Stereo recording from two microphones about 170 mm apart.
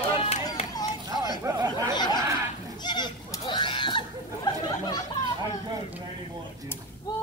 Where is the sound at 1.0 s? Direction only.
25° right (ahead or behind).